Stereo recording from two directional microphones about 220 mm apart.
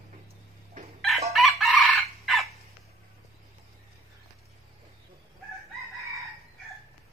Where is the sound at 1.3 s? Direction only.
Centre (ahead or behind).